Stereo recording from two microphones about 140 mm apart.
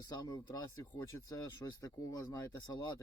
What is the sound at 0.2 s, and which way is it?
Speech, 30° left (ahead or behind).